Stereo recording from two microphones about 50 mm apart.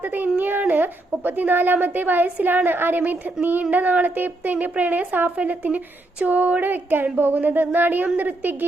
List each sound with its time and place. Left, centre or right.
0.0 s speech: right